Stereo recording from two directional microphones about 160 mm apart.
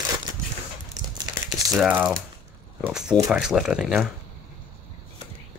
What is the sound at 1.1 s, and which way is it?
Crumpling, 25° right (ahead or behind).